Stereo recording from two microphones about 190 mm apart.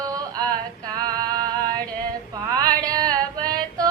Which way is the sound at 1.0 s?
20° right (ahead or behind).